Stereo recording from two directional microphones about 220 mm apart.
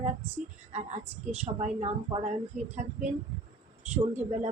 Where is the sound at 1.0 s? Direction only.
5° right (ahead or behind).